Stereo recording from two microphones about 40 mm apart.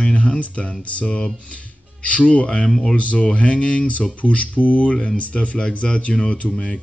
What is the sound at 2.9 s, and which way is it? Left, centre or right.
Speech, left.